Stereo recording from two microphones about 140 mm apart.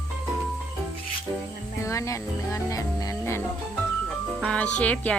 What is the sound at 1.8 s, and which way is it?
Speech, 20° left (ahead or behind).